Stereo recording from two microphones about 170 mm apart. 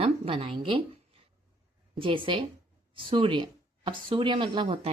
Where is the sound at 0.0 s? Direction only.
30° right (ahead or behind).